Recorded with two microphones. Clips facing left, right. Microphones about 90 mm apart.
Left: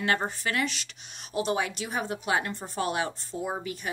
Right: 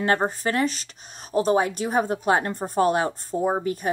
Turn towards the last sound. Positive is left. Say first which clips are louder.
# right 9 dB
turn(degrees=-40)  # may be behind; listen again after turning